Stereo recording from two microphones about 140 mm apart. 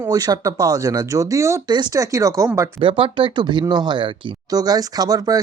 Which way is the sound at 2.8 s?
40° right (ahead or behind).